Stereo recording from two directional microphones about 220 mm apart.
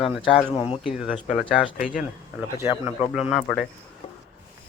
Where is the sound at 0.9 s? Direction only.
5° right (ahead or behind).